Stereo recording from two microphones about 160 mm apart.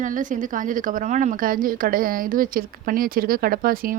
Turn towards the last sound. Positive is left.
turn(degrees=-60)  # may be behind; listen again after turning